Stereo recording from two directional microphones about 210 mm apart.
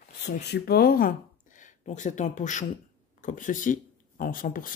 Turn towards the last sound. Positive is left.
turn(degrees=40)  # may be behind; listen again after turning